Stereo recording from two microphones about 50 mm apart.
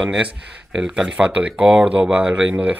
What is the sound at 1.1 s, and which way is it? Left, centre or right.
Speech, right.